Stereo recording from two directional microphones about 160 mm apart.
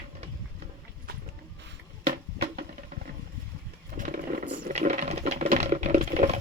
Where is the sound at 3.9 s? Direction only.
60° right (ahead or behind).